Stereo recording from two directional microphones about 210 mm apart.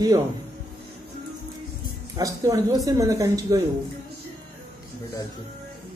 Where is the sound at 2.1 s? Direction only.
15° right (ahead or behind).